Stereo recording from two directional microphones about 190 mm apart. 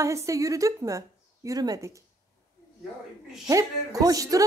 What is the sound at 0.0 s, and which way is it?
Speech, 15° right (ahead or behind).